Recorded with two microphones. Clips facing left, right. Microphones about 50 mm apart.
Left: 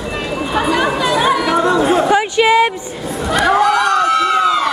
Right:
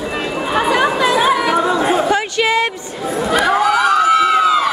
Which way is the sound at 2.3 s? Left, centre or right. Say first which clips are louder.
Left 6 dB; centre.